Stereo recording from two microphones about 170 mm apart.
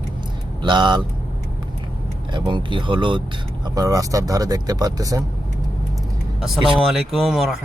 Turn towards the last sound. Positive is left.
turn(degrees=0)  # may be behind; listen again after turning